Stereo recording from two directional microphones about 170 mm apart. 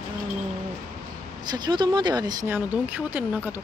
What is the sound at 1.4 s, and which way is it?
Speech, 25° right (ahead or behind).